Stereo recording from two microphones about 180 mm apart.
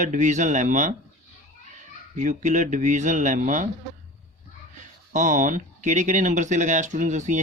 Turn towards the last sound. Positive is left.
turn(degrees=-40)  # may be behind; listen again after turning